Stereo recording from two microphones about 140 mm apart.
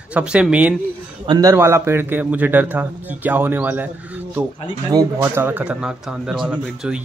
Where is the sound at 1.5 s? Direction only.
20° right (ahead or behind).